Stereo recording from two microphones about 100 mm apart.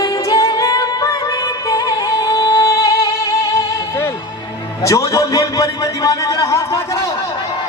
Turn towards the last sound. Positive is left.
turn(degrees=30)  # may be behind; listen again after turning